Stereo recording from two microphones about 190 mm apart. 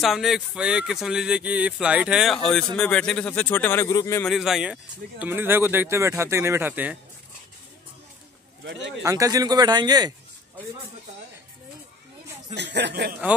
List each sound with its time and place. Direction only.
0.0 s speech: centre (ahead or behind); by 4.2 s 15° left (ahead or behind)
4.2 s speech: centre (ahead or behind)
8.6 s speech: 70° right (ahead or behind)
9.0 s speech: 20° right (ahead or behind)
12.5 s speech: 65° right (ahead or behind)